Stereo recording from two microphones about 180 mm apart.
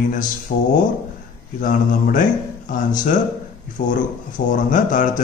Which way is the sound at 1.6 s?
50° left (ahead or behind).